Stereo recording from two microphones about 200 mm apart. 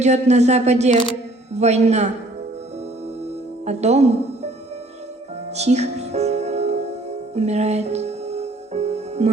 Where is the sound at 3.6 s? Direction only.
35° right (ahead or behind).